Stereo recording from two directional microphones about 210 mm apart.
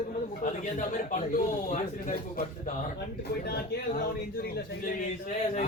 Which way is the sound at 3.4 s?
50° left (ahead or behind).